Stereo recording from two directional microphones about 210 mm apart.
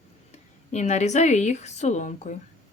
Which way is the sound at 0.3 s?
35° left (ahead or behind).